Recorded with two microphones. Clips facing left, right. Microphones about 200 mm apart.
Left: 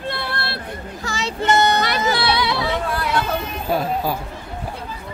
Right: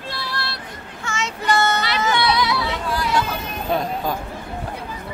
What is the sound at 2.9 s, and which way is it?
Hubbub, 55° left (ahead or behind).